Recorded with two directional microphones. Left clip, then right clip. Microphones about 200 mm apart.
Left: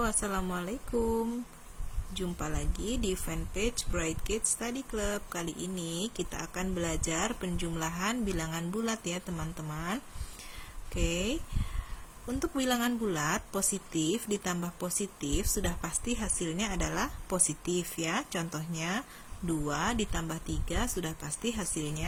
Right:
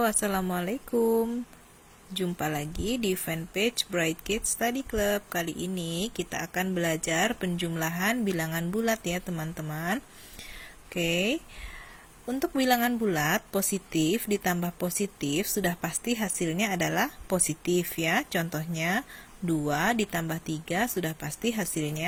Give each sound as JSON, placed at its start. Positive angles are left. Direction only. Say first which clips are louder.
{"t": 0.0, "sound": "speech", "louder": "right 5 dB", "side_deg": -25}
{"t": 12.4, "sound": "speech", "louder": "right 6 dB", "side_deg": -20}